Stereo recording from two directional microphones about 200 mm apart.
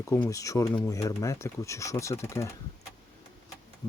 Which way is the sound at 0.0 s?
15° left (ahead or behind).